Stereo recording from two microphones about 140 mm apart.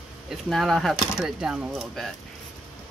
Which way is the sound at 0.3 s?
Centre (ahead or behind).